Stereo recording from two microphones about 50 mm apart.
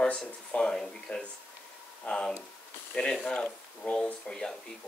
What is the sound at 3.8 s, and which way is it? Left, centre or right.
Speech, left.